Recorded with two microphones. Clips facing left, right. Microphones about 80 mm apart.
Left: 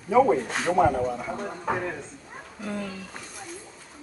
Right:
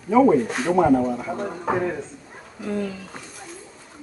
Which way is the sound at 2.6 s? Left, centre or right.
Centre.